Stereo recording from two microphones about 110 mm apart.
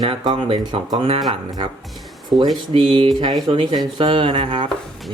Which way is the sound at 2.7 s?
45° right (ahead or behind).